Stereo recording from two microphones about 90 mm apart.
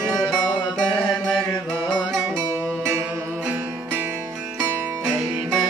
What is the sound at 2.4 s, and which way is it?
Music, 35° right (ahead or behind).